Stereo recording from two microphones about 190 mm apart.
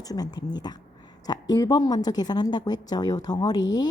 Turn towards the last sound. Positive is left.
turn(degrees=20)  # may be behind; listen again after turning